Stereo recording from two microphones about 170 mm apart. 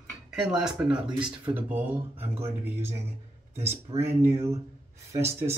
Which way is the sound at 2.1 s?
40° right (ahead or behind).